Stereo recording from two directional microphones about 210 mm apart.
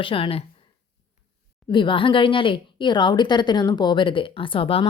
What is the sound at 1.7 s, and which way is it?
Speech, 25° left (ahead or behind).